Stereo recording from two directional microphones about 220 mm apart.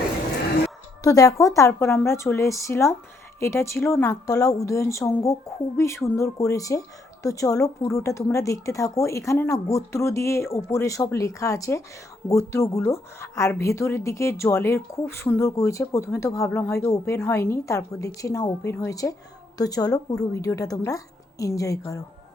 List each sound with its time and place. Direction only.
1.0 s a woman's voice: 15° left (ahead or behind)